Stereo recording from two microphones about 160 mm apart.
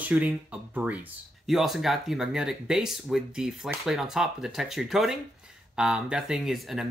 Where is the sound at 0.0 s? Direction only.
10° right (ahead or behind).